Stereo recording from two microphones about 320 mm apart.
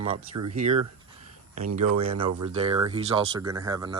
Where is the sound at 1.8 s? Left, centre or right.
Right.